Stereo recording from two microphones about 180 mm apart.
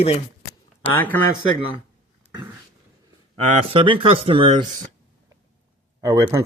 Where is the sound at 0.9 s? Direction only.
10° left (ahead or behind).